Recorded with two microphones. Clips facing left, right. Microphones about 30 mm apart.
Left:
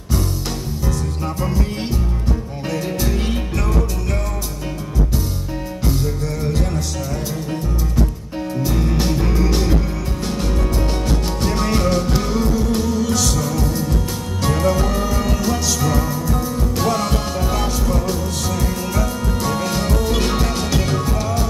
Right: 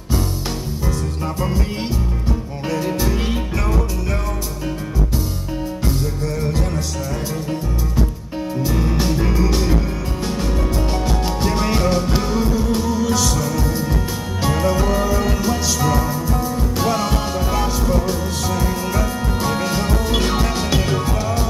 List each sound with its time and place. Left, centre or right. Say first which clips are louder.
2.7 s music: right 2 dB; centre
8.6 s music: even; centre